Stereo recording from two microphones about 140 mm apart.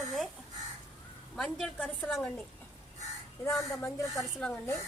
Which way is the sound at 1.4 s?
5° left (ahead or behind).